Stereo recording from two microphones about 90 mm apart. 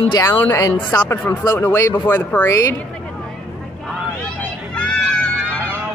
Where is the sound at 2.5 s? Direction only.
35° left (ahead or behind).